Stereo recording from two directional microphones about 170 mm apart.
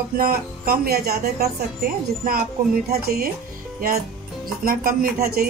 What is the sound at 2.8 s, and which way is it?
Speech, 60° right (ahead or behind).